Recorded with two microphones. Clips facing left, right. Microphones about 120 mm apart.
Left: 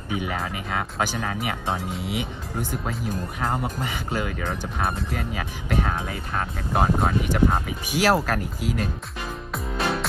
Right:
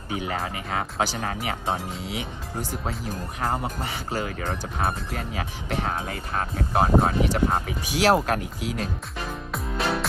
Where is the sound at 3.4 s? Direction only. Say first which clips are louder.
Even; 5° right (ahead or behind).